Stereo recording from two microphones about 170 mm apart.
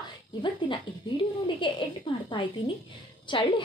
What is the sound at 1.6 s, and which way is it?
Speech, 30° left (ahead or behind).